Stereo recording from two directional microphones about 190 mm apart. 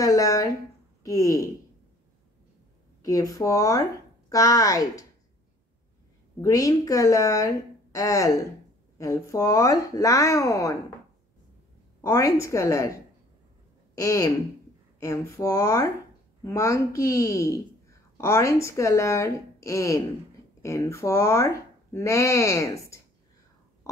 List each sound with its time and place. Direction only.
0.0 s speech: 15° left (ahead or behind)
3.0 s speech: 20° left (ahead or behind)
6.4 s speech: 20° left (ahead or behind)
12.0 s speech: 15° left (ahead or behind)
13.9 s speech: 15° left (ahead or behind)